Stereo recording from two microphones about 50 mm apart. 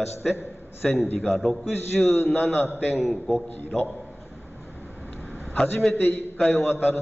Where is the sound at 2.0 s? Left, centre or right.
Left.